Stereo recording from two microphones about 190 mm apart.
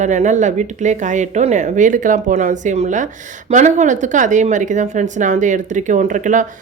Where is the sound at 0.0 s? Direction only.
40° right (ahead or behind).